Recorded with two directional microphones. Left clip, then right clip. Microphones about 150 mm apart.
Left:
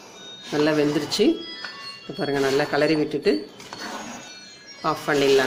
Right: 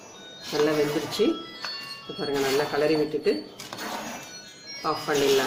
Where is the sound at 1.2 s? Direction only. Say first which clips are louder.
Left 4 dB; 50° left (ahead or behind).